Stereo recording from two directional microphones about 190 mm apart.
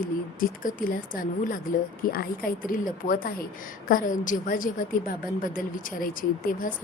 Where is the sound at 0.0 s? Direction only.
45° left (ahead or behind).